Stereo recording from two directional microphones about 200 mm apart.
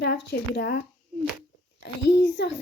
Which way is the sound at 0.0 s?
55° left (ahead or behind).